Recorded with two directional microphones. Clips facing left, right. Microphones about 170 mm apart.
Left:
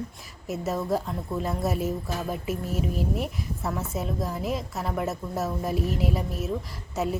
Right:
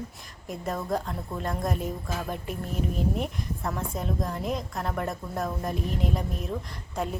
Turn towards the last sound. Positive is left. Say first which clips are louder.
# left 3 dB
turn(degrees=5)  # may be behind; listen again after turning